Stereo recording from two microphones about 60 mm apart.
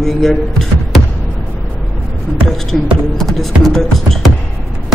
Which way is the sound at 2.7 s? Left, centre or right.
Centre.